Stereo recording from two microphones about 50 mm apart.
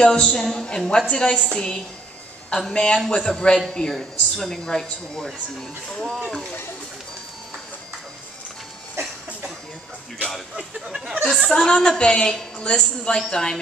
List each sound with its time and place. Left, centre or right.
0.0 s speech: centre
9.0 s cough: right
10.5 s speech: centre
11.4 s speech: centre